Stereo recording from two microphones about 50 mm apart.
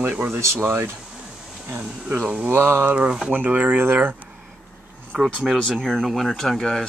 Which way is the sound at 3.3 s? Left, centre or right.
Right.